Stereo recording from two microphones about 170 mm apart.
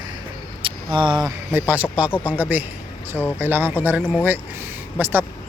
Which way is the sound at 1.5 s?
10° right (ahead or behind).